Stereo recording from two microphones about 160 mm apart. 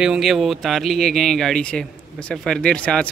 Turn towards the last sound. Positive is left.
turn(degrees=5)  # may be behind; listen again after turning